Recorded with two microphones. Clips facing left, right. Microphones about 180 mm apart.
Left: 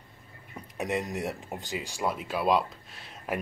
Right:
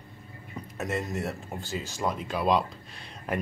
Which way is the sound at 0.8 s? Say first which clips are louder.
Left 1 dB; 15° left (ahead or behind).